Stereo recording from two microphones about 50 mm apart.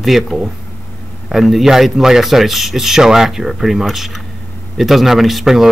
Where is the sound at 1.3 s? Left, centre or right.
Centre.